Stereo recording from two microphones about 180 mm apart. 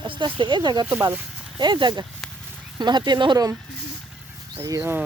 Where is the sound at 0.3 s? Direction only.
25° right (ahead or behind).